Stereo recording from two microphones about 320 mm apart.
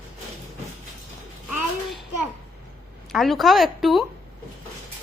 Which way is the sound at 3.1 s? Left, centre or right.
Centre.